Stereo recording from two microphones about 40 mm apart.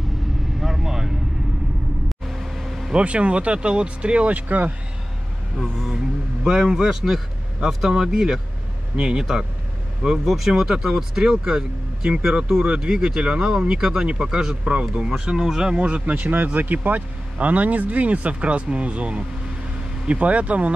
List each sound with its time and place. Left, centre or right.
0.6 s vehicle: centre
2.9 s speech: right
4.3 s speech: right
6.4 s speech: centre
14.6 s speech: right
15.7 s speech: right
16.1 s speech: right